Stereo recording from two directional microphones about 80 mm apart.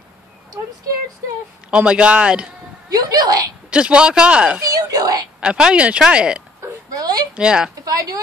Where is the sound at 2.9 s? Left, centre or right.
Right.